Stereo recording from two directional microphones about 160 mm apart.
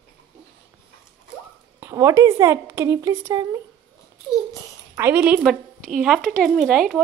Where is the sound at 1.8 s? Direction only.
20° right (ahead or behind).